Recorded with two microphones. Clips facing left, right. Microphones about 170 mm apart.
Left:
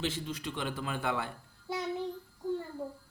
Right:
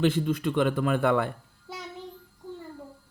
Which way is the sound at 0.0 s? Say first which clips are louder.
Right 11 dB; 55° right (ahead or behind).